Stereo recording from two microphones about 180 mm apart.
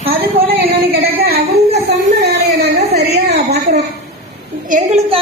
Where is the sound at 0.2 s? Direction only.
60° right (ahead or behind).